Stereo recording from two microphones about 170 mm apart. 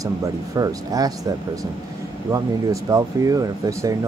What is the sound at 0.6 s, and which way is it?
Speech, 20° right (ahead or behind).